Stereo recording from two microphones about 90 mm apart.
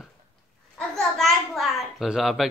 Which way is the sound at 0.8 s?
5° left (ahead or behind).